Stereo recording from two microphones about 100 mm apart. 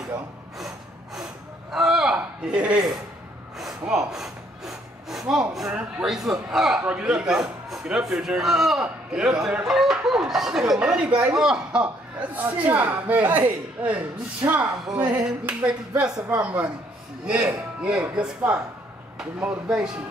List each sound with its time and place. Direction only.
0.6 s gasp: 5° right (ahead or behind)
3.5 s speech: 5° right (ahead or behind)